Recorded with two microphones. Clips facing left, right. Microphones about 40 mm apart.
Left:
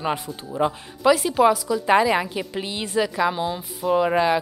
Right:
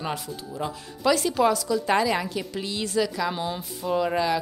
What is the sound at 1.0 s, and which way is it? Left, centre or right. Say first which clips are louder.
A woman's voice: left 4 dB; centre.